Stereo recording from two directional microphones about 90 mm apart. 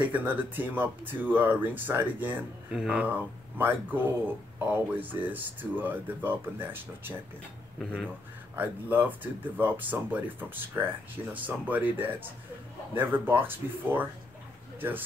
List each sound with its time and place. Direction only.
0.0 s speech: 20° right (ahead or behind)
2.7 s speech: 10° right (ahead or behind)
8.5 s speech: 20° right (ahead or behind)